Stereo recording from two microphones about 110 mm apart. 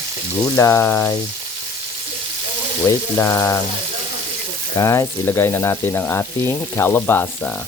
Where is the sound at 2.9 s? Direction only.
25° left (ahead or behind).